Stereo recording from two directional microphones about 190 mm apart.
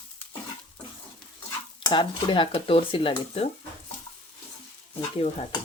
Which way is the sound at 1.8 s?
25° left (ahead or behind).